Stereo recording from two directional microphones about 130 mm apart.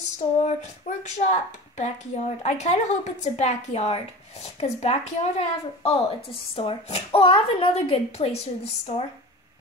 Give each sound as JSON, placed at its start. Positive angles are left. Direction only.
{"t": 0.5, "sound": "speech", "side_deg": 60}